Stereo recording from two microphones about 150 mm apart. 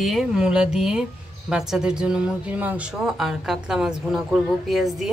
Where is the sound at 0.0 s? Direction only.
Centre (ahead or behind).